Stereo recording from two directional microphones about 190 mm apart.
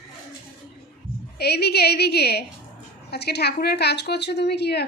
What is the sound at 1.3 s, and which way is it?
A woman's voice, 60° left (ahead or behind).